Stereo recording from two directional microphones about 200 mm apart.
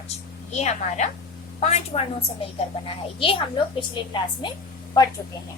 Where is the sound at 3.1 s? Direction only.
30° left (ahead or behind).